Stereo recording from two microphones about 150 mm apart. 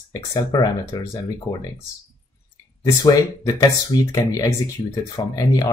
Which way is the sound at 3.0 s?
25° left (ahead or behind).